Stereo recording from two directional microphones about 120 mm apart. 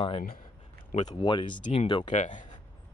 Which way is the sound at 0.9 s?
70° left (ahead or behind).